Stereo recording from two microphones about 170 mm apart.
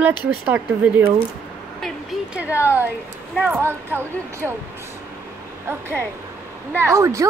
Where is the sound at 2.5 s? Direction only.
15° left (ahead or behind).